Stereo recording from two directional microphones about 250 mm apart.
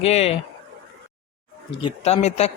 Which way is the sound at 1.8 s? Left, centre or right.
Left.